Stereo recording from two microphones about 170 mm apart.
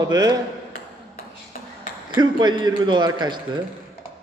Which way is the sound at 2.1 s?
25° right (ahead or behind).